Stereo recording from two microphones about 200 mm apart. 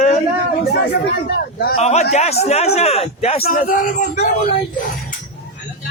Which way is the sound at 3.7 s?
40° left (ahead or behind).